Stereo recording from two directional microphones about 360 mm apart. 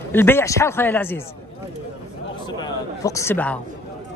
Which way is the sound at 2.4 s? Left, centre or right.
Centre.